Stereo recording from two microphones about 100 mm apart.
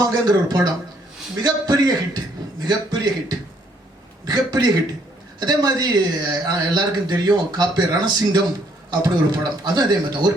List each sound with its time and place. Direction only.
0.0 s a man's voice: 40° right (ahead or behind)